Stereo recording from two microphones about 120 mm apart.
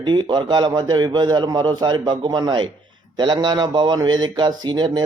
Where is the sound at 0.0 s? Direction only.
40° right (ahead or behind).